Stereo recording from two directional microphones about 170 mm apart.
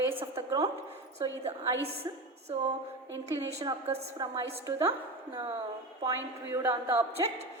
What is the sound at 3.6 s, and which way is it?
A woman's voice, 25° right (ahead or behind).